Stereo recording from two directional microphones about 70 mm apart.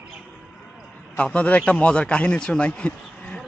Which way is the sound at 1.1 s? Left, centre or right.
Centre.